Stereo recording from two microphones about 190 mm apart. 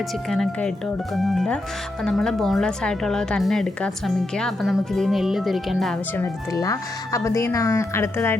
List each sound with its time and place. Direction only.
0.3 s a woman's voice: centre (ahead or behind)
6.1 s speech: 15° left (ahead or behind)